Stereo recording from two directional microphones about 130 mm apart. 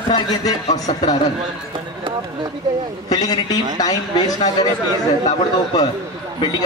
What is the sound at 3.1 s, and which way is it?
Speech, 30° left (ahead or behind).